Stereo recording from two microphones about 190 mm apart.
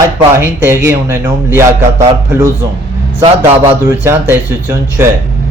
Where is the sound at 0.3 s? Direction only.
10° right (ahead or behind).